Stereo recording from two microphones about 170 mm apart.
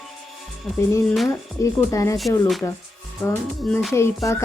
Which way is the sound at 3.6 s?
5° left (ahead or behind).